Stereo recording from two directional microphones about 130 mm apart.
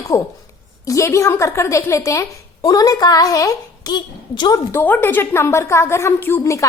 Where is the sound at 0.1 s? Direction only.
25° left (ahead or behind).